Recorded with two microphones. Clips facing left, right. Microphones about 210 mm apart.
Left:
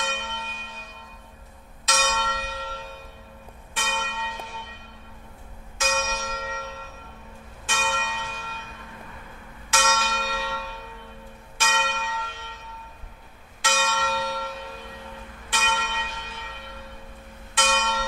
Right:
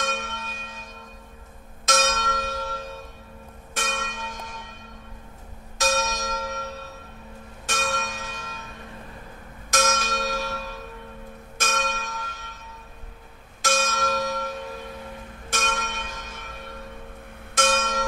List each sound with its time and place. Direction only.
0.0 s church bell: 45° right (ahead or behind)
1.9 s church bell: 45° right (ahead or behind)
5.8 s church bell: 40° right (ahead or behind)
9.7 s church bell: 40° right (ahead or behind)
13.6 s church bell: 45° right (ahead or behind)
15.5 s church bell: 45° right (ahead or behind)
17.6 s church bell: 45° right (ahead or behind)